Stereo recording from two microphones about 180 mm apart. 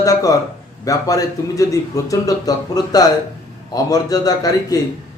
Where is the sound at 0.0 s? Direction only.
20° left (ahead or behind).